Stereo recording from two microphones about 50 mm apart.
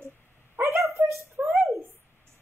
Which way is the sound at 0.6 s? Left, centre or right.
Right.